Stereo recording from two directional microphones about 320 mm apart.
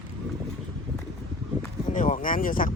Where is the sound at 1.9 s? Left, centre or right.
Left.